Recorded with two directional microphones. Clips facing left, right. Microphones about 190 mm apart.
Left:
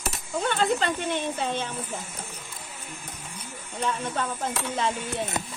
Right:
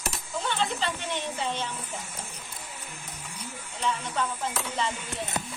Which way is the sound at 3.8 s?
50° left (ahead or behind).